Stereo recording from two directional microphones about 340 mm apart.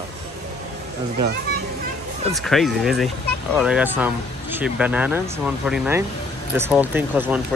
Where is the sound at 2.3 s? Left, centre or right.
Centre.